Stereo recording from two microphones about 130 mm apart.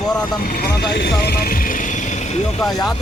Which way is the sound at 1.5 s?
90° left.